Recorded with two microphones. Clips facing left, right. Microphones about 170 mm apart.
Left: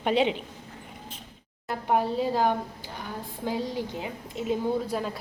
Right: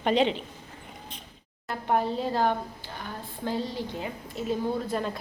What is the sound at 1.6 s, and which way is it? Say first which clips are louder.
A woman's voice: left 1 dB; 10° left (ahead or behind).